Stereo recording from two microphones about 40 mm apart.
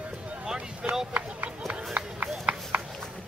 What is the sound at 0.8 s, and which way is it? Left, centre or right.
Run, right.